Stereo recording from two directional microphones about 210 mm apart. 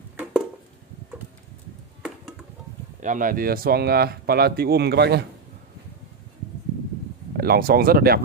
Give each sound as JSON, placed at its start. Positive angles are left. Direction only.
{"t": 3.0, "sound": "speech", "side_deg": -40}
{"t": 7.3, "sound": "speech", "side_deg": -45}